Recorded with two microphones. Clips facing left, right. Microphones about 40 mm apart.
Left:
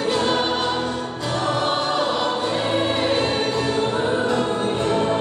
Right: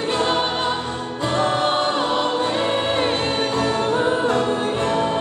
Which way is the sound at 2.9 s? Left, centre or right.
Right.